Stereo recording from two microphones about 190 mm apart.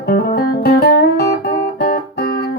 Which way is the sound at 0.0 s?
55° left (ahead or behind).